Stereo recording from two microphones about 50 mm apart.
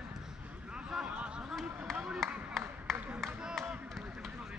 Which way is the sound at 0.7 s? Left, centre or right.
Centre.